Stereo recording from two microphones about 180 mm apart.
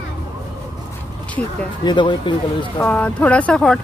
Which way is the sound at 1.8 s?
25° left (ahead or behind).